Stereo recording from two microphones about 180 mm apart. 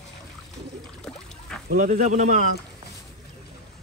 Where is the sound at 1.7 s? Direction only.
45° right (ahead or behind).